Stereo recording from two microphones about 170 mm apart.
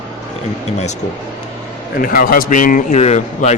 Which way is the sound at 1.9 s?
55° left (ahead or behind).